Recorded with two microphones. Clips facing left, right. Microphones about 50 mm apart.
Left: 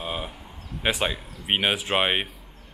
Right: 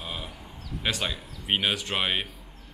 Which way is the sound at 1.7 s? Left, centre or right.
Centre.